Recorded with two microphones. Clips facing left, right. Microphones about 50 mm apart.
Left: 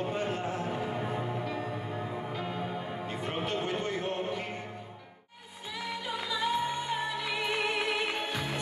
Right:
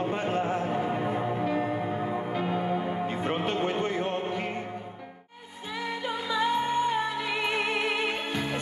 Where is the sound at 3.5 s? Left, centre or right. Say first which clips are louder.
Right 3 dB; right.